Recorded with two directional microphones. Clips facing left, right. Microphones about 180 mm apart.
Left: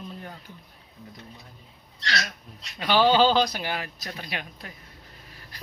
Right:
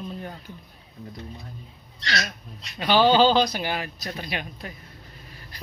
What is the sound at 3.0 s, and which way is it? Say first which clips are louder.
A man's voice: right 1 dB; centre (ahead or behind).